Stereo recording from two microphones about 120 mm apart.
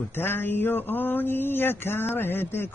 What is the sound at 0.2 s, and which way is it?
Mantra, 15° left (ahead or behind).